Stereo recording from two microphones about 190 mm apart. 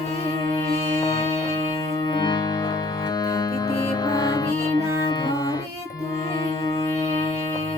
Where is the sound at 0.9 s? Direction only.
20° left (ahead or behind).